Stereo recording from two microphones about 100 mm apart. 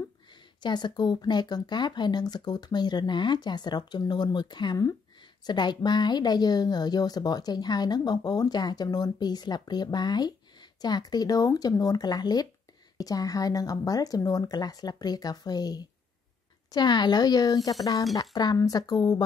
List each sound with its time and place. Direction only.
0.6 s a woman's voice: 45° left (ahead or behind)